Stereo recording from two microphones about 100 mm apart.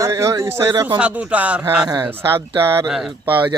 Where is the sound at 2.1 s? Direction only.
25° right (ahead or behind).